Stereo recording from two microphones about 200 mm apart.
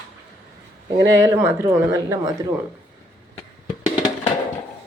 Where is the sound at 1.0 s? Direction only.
15° right (ahead or behind).